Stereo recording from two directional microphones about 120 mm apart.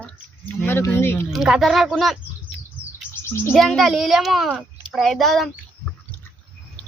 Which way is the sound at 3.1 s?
20° left (ahead or behind).